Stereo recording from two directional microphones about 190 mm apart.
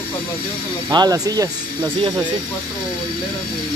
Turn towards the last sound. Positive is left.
turn(degrees=-25)  # may be behind; listen again after turning